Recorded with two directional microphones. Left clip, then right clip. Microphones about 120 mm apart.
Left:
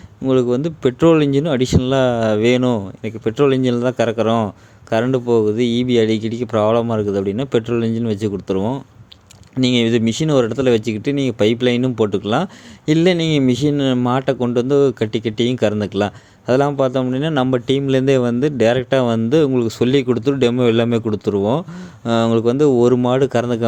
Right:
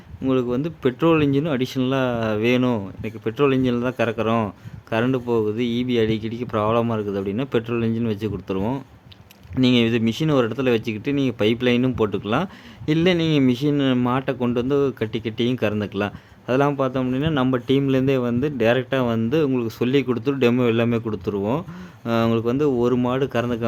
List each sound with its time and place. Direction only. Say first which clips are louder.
0.3 s speech: left 6 dB; 30° left (ahead or behind)